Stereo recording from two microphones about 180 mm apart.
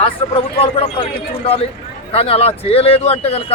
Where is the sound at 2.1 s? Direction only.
30° left (ahead or behind).